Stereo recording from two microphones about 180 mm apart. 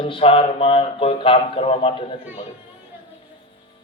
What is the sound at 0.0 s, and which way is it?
Speech, 30° left (ahead or behind).